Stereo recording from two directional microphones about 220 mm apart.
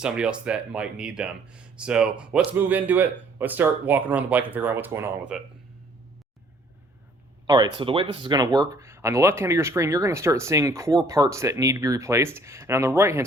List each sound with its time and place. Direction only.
0.0 s speech: 5° right (ahead or behind)
7.4 s speech: 20° right (ahead or behind)